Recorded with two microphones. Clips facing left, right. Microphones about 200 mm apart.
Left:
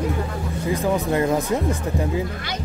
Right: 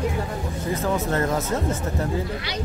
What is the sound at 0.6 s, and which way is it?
Speech, 15° left (ahead or behind).